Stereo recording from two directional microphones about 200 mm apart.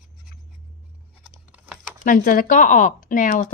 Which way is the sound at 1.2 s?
5° right (ahead or behind).